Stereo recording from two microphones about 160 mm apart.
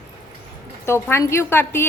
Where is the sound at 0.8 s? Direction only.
15° left (ahead or behind).